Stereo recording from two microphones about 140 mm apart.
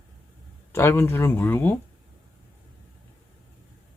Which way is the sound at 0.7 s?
20° left (ahead or behind).